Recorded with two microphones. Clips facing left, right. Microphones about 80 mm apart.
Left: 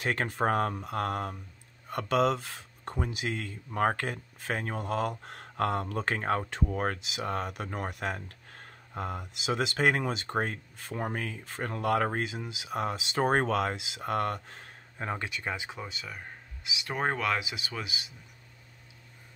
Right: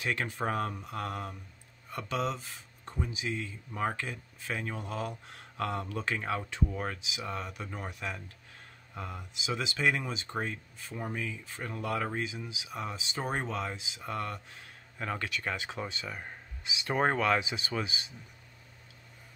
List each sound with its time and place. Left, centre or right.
0.0 s speech: left
15.0 s speech: left
16.8 s speech: centre
17.4 s speech: centre